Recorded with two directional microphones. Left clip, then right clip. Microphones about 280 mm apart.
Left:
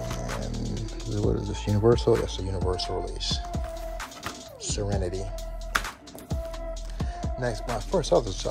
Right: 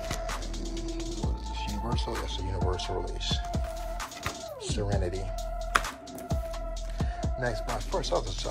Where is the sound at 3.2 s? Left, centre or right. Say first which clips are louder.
Left 1 dB; centre.